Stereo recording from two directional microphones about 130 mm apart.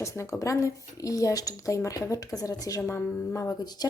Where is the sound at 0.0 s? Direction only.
25° left (ahead or behind).